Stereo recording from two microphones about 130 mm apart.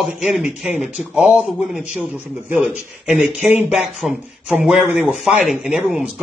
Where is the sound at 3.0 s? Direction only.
Centre (ahead or behind).